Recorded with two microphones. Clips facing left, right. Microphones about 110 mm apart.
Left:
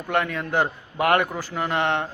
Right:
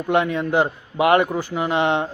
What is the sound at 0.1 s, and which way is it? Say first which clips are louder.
A man's voice: right 5 dB; 15° right (ahead or behind).